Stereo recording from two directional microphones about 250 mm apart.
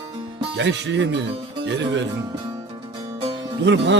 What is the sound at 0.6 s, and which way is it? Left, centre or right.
Speech, right.